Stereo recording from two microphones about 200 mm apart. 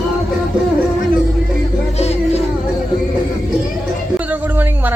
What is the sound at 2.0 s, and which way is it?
Music, 30° left (ahead or behind).